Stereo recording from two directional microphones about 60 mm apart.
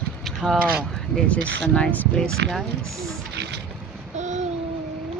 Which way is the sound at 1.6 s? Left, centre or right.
Centre.